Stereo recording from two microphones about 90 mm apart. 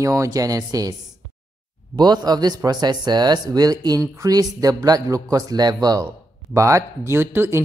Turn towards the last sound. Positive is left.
turn(degrees=-25)  # may be behind; listen again after turning